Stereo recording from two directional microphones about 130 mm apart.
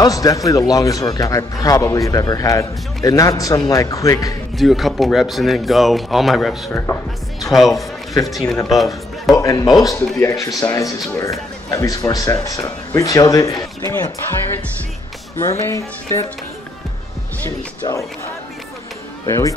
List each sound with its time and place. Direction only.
0.0 s a man's voice: 25° left (ahead or behind)
4.6 s speech: centre (ahead or behind)
9.3 s a man's voice: 25° left (ahead or behind)
17.8 s a man's voice: 25° left (ahead or behind)